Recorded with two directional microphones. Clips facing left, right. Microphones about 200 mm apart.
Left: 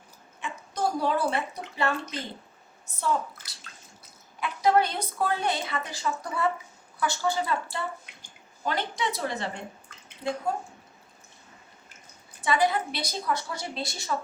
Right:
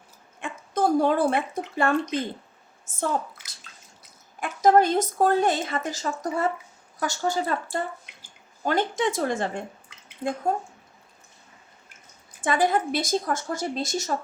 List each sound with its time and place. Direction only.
0.3 s speech: 50° right (ahead or behind)
4.4 s a woman's voice: 45° right (ahead or behind)
12.4 s a woman's voice: 50° right (ahead or behind)